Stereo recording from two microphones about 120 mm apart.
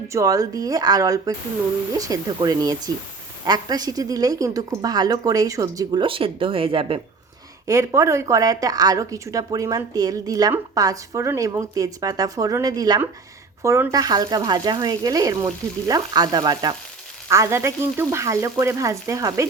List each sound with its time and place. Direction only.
0.1 s speech: 30° right (ahead or behind); by 7.0 s 50° right (ahead or behind)
7.7 s speech: 25° right (ahead or behind)
17.2 s speech: 25° right (ahead or behind)